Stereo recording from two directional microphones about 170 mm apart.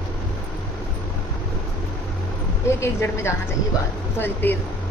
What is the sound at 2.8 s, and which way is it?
A woman's voice, 15° left (ahead or behind).